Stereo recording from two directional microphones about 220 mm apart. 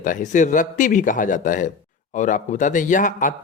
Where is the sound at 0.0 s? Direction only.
35° left (ahead or behind).